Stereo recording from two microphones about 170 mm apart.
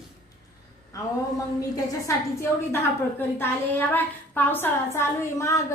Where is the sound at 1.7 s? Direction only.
20° left (ahead or behind).